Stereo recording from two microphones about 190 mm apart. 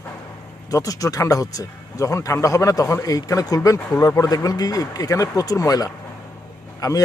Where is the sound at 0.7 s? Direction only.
20° left (ahead or behind).